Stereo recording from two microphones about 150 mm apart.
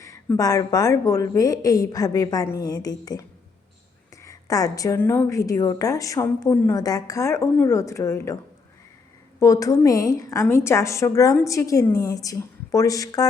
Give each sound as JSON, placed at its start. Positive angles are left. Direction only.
{"t": 0.0, "sound": "a woman's voice", "side_deg": 20}
{"t": 9.4, "sound": "a woman's voice", "side_deg": 20}